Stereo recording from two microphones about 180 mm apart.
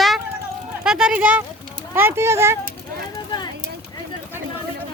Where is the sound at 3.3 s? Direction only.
25° left (ahead or behind).